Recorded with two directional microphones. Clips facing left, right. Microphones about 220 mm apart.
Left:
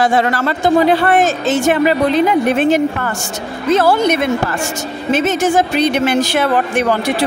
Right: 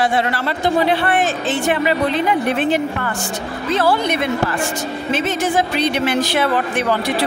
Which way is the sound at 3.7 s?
45° left (ahead or behind).